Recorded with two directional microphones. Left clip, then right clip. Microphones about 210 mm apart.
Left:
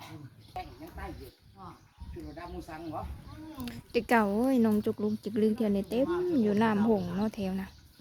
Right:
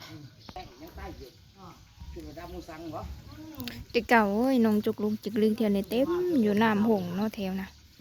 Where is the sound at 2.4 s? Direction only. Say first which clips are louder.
Even; 40° left (ahead or behind).